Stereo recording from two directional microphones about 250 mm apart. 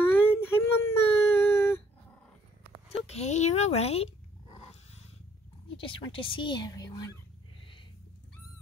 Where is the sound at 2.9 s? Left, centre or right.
Left.